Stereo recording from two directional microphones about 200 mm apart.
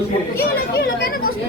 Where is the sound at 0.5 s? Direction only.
45° left (ahead or behind).